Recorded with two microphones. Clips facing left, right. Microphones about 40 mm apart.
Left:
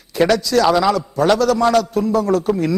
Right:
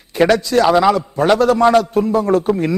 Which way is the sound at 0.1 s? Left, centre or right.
Right.